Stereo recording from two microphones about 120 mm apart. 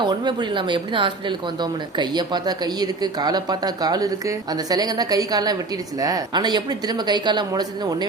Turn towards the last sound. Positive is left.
turn(degrees=-35)  # may be behind; listen again after turning